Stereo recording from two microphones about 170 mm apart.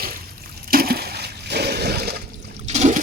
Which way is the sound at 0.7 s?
65° right (ahead or behind).